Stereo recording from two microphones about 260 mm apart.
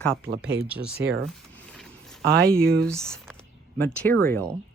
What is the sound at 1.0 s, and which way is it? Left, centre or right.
Speech, centre.